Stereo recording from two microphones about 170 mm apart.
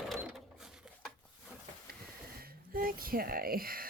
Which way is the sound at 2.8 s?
60° right (ahead or behind).